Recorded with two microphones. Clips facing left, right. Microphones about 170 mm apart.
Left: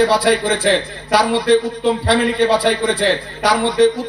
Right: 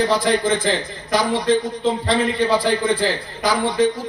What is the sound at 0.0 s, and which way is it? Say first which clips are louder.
A man's voice: left 4 dB; 75° left (ahead or behind).